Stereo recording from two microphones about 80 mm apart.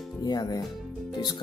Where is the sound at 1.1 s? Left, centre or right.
Left.